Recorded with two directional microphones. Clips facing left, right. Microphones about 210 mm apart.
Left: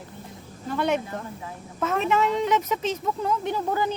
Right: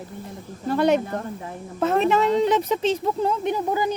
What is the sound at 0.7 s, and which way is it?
Speech, 40° right (ahead or behind).